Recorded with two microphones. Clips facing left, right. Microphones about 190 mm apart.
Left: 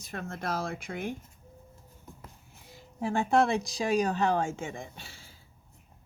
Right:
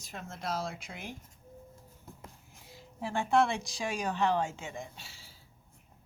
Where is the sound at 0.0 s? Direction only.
55° left (ahead or behind).